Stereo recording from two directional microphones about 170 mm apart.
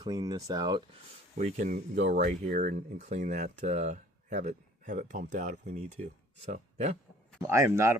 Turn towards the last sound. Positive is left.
turn(degrees=-15)  # may be behind; listen again after turning